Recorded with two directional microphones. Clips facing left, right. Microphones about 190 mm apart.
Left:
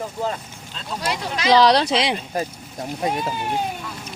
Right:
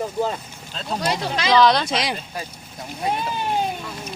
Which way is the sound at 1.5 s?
35° left (ahead or behind).